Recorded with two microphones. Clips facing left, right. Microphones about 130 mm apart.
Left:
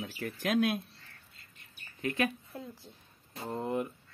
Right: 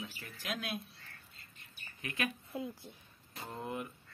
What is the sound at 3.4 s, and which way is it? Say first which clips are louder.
Speech: left 7 dB; 35° left (ahead or behind).